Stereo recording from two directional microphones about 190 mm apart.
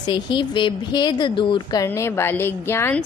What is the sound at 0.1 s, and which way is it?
A woman's voice, 25° left (ahead or behind).